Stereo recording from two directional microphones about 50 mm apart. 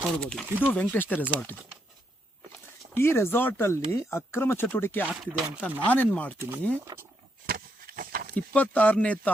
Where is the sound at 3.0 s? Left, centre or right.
Left.